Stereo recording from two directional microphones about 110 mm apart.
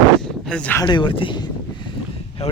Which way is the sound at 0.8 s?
45° left (ahead or behind).